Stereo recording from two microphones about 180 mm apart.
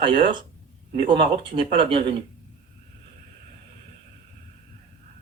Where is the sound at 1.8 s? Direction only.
30° right (ahead or behind).